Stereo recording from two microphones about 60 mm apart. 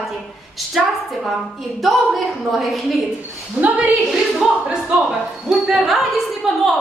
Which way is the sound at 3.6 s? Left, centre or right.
Right.